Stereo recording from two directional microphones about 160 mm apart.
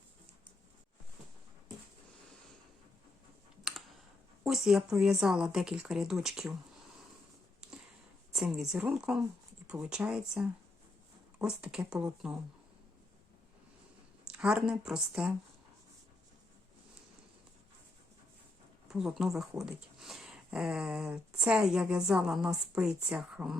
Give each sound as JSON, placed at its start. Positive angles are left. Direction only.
{"t": 3.6, "sound": "computer keyboard", "side_deg": 0}
{"t": 4.4, "sound": "speech", "side_deg": -5}
{"t": 8.3, "sound": "speech", "side_deg": -5}
{"t": 14.3, "sound": "speech", "side_deg": -5}
{"t": 18.9, "sound": "speech", "side_deg": -5}